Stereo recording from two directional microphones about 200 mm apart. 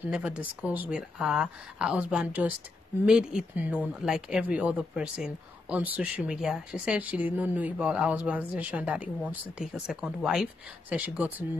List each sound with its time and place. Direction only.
0.0 s speech: 5° right (ahead or behind)